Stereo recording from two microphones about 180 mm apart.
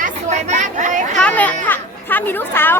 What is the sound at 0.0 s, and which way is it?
Speech, 40° right (ahead or behind).